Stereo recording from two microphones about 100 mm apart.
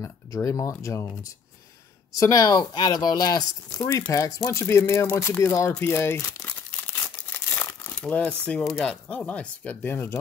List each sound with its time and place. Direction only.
0.0 s speech: 30° left (ahead or behind)
3.7 s speech: 20° left (ahead or behind)
4.1 s speech: 30° left (ahead or behind)
7.3 s crumpling: 25° left (ahead or behind)
7.9 s speech: 10° left (ahead or behind)
8.6 s speech: centre (ahead or behind)
9.1 s speech: 15° left (ahead or behind)